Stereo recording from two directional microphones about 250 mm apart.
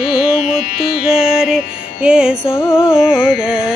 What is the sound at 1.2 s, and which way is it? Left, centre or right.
Music, centre.